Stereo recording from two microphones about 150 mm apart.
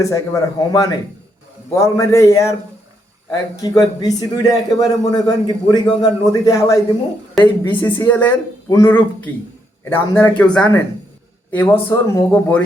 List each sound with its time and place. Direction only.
0.0 s a man's voice: 25° left (ahead or behind)